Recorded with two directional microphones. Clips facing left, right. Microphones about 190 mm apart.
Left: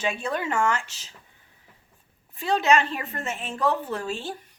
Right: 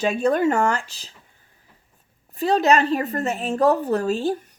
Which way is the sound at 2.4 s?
40° right (ahead or behind).